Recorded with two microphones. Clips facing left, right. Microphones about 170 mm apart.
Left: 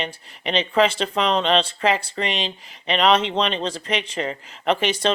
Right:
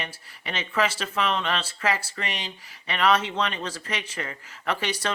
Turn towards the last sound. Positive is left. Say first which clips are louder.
# left 7 dB
turn(degrees=25)  # may be behind; listen again after turning